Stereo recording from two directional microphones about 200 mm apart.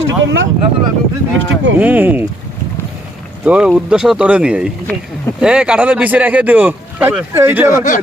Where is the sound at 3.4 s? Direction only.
5° right (ahead or behind).